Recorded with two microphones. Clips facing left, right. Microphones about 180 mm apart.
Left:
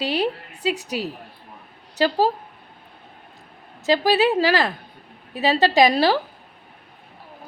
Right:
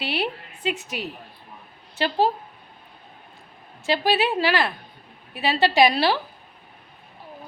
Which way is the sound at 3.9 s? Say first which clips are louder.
Left 4 dB; 40° left (ahead or behind).